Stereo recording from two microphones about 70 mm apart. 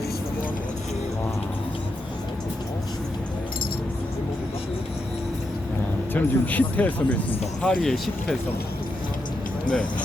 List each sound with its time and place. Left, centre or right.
6.1 s speech: left
7.8 s speech: centre